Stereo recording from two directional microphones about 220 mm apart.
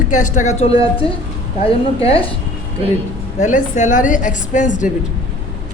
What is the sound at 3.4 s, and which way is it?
A woman's voice, 35° left (ahead or behind).